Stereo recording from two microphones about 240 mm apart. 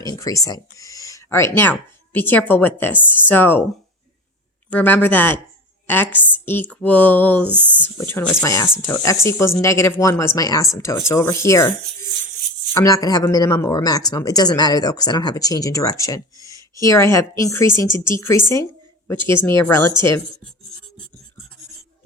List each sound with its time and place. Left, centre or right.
0.0 s a sound: centre
2.1 s speech: centre
4.7 s speech: centre
12.7 s speech: centre
18.5 s a sound: centre
19.5 s speech: centre